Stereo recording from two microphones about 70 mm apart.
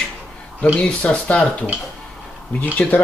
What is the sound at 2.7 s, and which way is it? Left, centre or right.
Speech, left.